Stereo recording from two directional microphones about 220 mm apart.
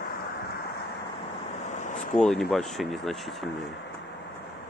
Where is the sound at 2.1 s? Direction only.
Centre (ahead or behind).